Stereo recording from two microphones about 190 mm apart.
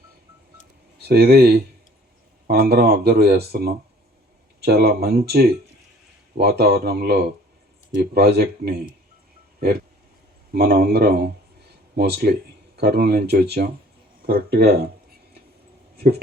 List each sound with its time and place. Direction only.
1.0 s speech: 55° right (ahead or behind)
10.5 s speech: 55° right (ahead or behind)